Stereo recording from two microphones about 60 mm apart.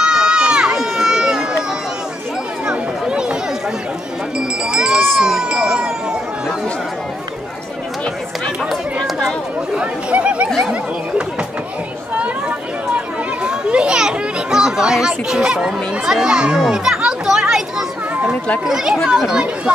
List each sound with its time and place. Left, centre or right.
0.0 s run: centre
2.6 s a sound: centre
4.4 s a sound: centre
9.8 s chatter: centre
12.2 s chatter: right
16.6 s music: centre
19.0 s speech: centre